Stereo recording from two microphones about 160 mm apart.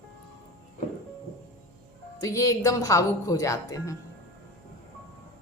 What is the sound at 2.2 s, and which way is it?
A woman's voice, 20° left (ahead or behind).